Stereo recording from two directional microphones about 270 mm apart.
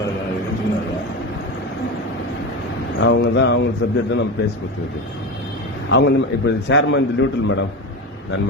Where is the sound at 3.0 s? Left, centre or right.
Left.